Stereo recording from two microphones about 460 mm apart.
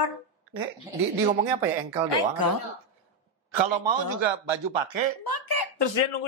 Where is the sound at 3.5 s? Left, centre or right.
Right.